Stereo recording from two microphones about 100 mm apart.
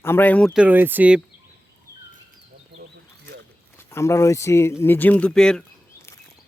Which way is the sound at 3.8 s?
25° left (ahead or behind).